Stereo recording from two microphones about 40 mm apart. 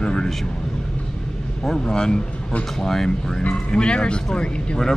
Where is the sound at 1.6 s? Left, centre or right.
Centre.